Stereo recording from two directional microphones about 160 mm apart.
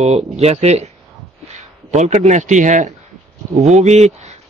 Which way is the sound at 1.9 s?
45° right (ahead or behind).